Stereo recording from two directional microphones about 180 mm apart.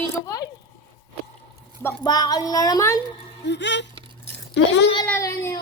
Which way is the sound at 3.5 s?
75° left (ahead or behind).